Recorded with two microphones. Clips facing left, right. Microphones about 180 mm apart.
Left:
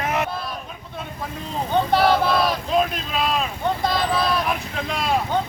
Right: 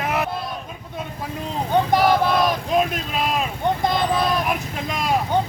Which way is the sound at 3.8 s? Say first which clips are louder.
Right 1 dB; 20° right (ahead or behind).